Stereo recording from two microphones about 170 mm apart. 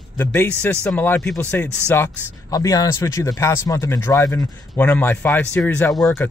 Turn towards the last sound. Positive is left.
turn(degrees=5)  # may be behind; listen again after turning